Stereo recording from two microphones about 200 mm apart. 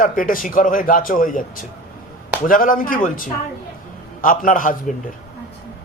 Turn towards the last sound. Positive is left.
turn(degrees=40)  # may be behind; listen again after turning